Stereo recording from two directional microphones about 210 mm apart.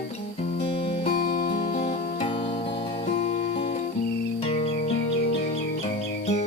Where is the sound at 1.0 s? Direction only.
40° left (ahead or behind).